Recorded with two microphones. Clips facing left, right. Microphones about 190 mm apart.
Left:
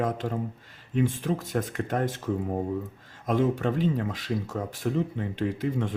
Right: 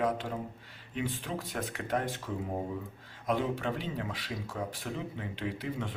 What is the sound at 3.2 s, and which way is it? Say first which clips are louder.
Speech: left 6 dB; 45° left (ahead or behind).